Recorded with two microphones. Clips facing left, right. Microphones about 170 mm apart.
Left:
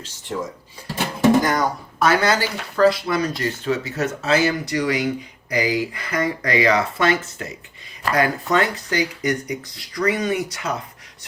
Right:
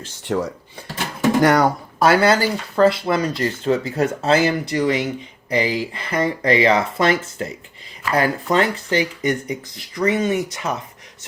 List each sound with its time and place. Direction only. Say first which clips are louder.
0.3 s speech: right 5 dB; 70° right (ahead or behind)
2.0 s speech: right 3 dB; 30° right (ahead or behind)